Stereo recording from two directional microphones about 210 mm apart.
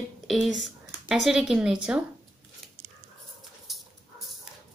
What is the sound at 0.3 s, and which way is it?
Speech, centre (ahead or behind).